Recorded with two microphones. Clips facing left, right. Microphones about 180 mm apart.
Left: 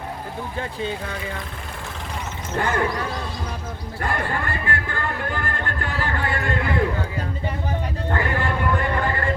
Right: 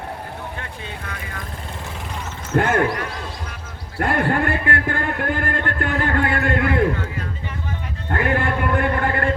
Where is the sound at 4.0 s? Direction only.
60° right (ahead or behind).